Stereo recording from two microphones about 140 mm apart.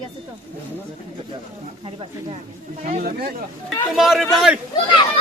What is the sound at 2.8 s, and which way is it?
Speech, 80° right.